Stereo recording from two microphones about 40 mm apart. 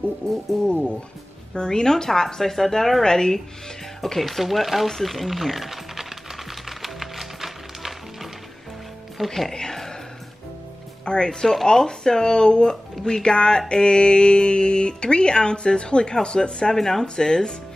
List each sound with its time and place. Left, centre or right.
1.5 s speech: centre
4.0 s speech: centre
6.8 s music: centre
9.3 s speech: centre
11.1 s music: left
11.4 s speech: centre
12.9 s music: centre
16.7 s speech: centre